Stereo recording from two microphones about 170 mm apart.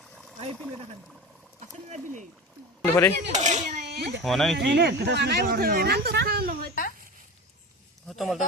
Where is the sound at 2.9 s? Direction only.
15° left (ahead or behind).